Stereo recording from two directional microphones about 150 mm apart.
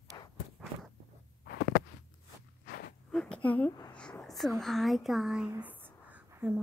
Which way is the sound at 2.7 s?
90° left.